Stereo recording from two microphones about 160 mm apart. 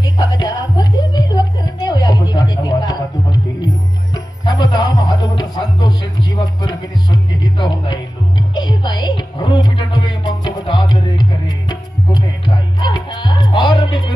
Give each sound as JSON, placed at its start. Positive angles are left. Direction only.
{"t": 0.0, "sound": "a sound", "side_deg": 25}
{"t": 4.1, "sound": "music", "side_deg": 25}
{"t": 12.8, "sound": "music", "side_deg": 30}